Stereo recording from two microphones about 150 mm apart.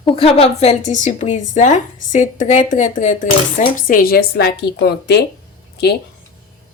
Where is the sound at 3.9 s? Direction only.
75° left (ahead or behind); by 5.2 s 90° left.